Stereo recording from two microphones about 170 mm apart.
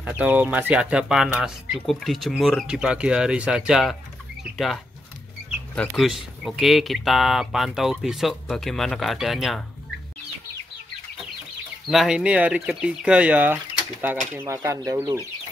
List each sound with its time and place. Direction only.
0.0 s speech: 10° right (ahead or behind)
5.8 s speech: centre (ahead or behind)
11.9 s speech: 5° right (ahead or behind); by 15.1 s 20° right (ahead or behind)